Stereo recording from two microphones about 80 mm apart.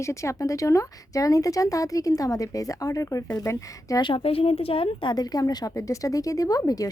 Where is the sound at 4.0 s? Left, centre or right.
Left.